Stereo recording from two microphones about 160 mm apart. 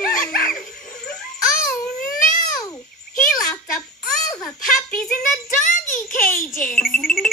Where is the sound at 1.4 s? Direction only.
60° left (ahead or behind).